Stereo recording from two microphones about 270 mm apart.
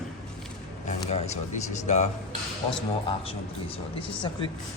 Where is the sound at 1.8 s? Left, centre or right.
Left.